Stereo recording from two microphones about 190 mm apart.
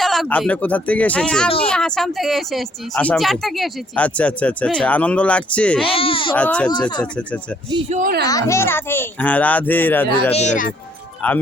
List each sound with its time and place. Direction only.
0.0 s a child's voice: centre (ahead or behind)
5.8 s speech: 30° left (ahead or behind)
6.3 s a child's voice: 5° left (ahead or behind)
7.9 s speech: 40° right (ahead or behind)
8.2 s a child's voice: 20° left (ahead or behind)
10.3 s speech: 40° left (ahead or behind)
11.2 s a child's voice: 5° left (ahead or behind)